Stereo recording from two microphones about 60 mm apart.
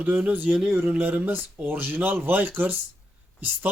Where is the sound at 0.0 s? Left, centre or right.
Right.